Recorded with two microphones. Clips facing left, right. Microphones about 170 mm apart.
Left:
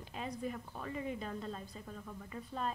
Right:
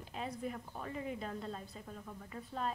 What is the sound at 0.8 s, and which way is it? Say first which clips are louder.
Speech: left 1 dB; centre (ahead or behind).